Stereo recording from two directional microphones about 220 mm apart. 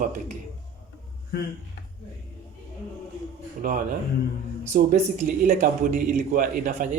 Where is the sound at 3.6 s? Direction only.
40° right (ahead or behind).